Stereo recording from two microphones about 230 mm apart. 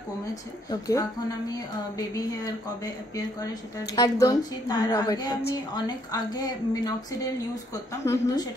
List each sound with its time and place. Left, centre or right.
0.3 s speech: centre